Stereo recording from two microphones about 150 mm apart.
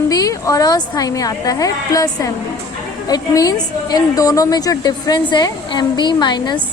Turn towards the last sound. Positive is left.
turn(degrees=30)  # may be behind; listen again after turning